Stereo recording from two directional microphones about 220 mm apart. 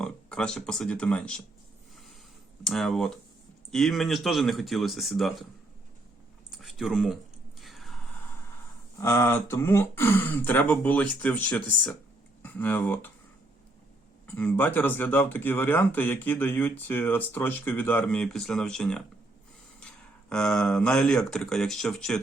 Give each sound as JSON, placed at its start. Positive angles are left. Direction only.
{"t": 0.0, "sound": "speech", "side_deg": 5}
{"t": 2.6, "sound": "speech", "side_deg": 0}
{"t": 6.5, "sound": "a sound", "side_deg": 0}
{"t": 9.0, "sound": "speech", "side_deg": 15}
{"t": 14.3, "sound": "speech", "side_deg": 10}
{"t": 20.3, "sound": "speech", "side_deg": 5}